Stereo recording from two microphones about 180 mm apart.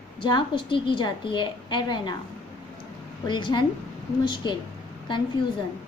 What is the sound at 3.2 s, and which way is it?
A woman's voice, 25° left (ahead or behind).